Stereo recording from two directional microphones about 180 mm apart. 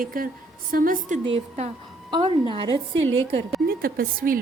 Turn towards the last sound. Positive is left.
turn(degrees=-50)  # may be behind; listen again after turning